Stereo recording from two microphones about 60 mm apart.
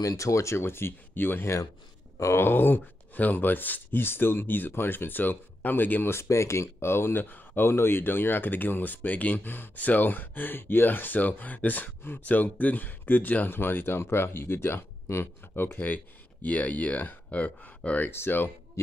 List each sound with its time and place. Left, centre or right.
0.0 s speech: left
6.1 s speech: left
18.1 s speech: left